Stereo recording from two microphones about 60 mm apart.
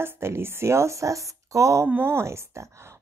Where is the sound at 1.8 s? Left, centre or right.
Right.